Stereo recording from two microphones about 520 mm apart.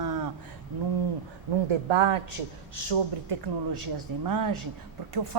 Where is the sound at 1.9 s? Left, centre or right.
Right.